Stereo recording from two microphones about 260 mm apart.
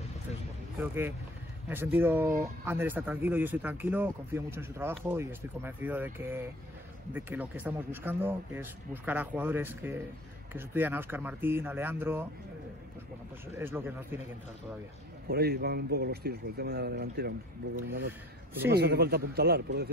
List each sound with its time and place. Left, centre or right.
0.7 s speech: centre
13.5 s speech: centre
15.2 s speech: right